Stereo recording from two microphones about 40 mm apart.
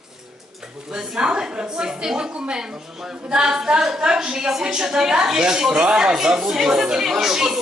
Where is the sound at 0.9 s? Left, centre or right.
Centre.